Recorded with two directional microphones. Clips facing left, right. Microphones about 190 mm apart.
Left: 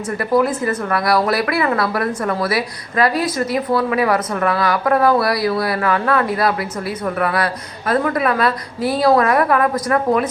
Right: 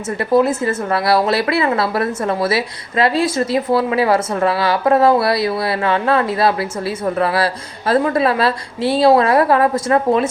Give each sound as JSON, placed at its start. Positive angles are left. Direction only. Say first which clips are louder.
{"t": 0.2, "sound": "a woman's voice", "louder": "right 2 dB", "side_deg": -25}